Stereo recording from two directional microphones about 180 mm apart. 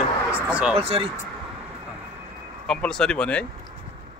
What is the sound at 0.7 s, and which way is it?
Speech, 35° right (ahead or behind).